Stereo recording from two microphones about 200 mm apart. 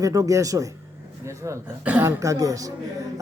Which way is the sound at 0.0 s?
15° right (ahead or behind).